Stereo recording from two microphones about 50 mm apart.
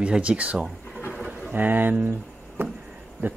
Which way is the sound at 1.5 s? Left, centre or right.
Right.